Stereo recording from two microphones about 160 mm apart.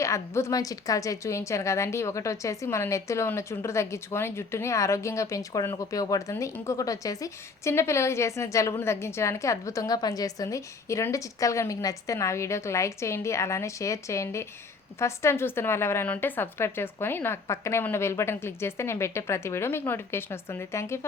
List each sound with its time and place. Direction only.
0.0 s a woman's voice: 20° left (ahead or behind)